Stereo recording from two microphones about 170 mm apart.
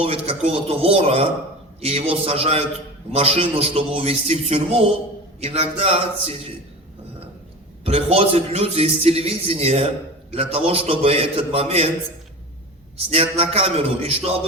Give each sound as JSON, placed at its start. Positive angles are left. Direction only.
{"t": 0.0, "sound": "a man's voice", "side_deg": -35}
{"t": 7.9, "sound": "a man's voice", "side_deg": -35}
{"t": 13.0, "sound": "a man's voice", "side_deg": -35}